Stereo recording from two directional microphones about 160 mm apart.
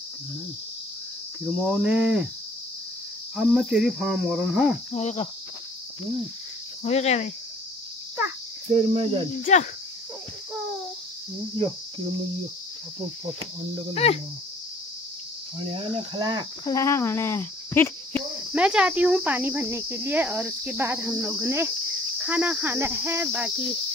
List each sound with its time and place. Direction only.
1.4 s cricket: centre (ahead or behind)
3.3 s cricket: centre (ahead or behind)
4.9 s cricket: 40° left (ahead or behind)
6.8 s cricket: 40° left (ahead or behind)
8.7 s cricket: 35° right (ahead or behind)
9.4 s cricket: 45° left (ahead or behind)
13.9 s cricket: 40° left (ahead or behind)
15.7 s cricket: 30° right (ahead or behind)
16.6 s speech: 20° left (ahead or behind)
18.5 s speech: 5° right (ahead or behind)